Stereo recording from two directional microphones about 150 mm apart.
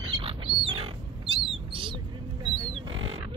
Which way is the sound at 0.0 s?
35° right (ahead or behind).